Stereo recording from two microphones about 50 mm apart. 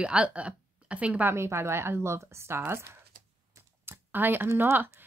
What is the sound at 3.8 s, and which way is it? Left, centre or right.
Computer keyboard, right.